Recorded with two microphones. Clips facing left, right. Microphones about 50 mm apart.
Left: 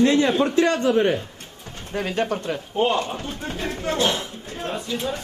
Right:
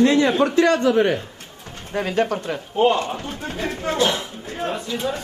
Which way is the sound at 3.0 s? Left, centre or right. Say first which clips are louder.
Right 1 dB; centre.